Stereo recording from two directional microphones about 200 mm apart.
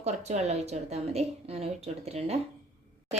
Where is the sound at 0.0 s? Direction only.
35° right (ahead or behind).